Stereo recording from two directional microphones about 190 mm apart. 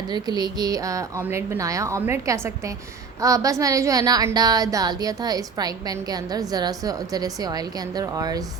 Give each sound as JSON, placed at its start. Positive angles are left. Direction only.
{"t": 0.1, "sound": "a woman's voice", "side_deg": -20}